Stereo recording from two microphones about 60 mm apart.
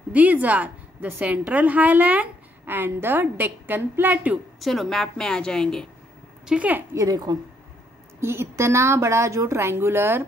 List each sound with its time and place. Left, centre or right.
0.1 s a woman's voice: right
2.6 s a woman's voice: right
4.6 s a woman's voice: centre
6.5 s a woman's voice: centre
6.9 s a woman's voice: right
8.2 s a woman's voice: right